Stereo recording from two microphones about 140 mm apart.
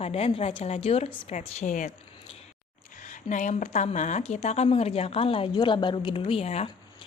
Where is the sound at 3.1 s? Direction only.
60° left (ahead or behind).